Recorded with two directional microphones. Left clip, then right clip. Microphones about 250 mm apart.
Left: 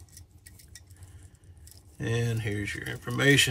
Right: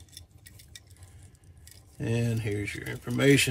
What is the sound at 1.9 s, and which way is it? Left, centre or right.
Speech, centre.